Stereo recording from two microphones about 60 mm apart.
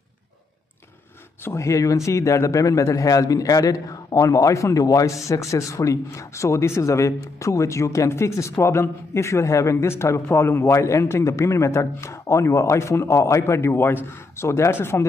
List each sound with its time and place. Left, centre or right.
1.4 s a man's voice: left